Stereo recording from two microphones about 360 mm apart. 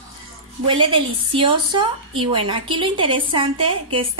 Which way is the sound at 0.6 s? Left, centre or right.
Centre.